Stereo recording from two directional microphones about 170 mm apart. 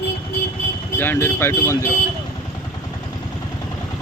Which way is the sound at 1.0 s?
10° left (ahead or behind).